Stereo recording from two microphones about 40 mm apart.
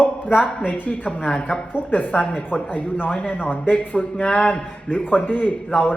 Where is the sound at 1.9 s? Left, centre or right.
Left.